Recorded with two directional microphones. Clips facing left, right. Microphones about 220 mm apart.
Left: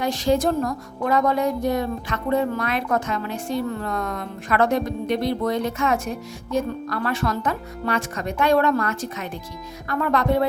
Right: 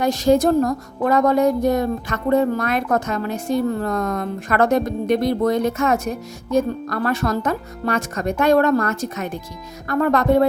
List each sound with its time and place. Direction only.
0.0 s a woman's voice: 45° right (ahead or behind)